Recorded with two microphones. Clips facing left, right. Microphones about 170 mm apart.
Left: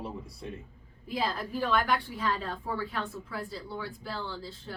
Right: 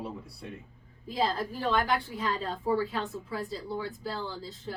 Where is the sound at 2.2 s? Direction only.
20° right (ahead or behind).